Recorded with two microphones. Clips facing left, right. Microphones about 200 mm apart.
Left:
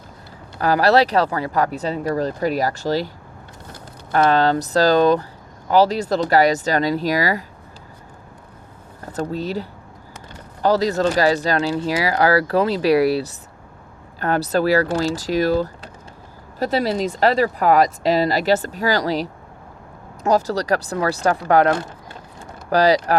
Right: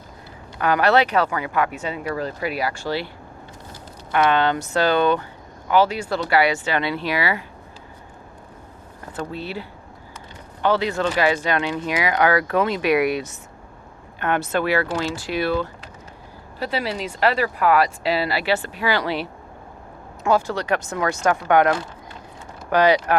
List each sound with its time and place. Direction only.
0.6 s speech: 35° left (ahead or behind)
4.1 s speech: 35° left (ahead or behind)
9.1 s speech: 40° left (ahead or behind)